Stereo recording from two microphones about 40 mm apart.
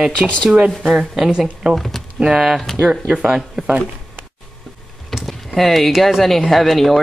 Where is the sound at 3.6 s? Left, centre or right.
Centre.